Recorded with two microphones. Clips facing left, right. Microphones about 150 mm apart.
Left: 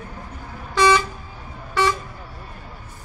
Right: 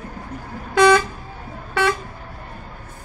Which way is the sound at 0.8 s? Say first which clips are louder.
Right 3 dB; 60° right (ahead or behind).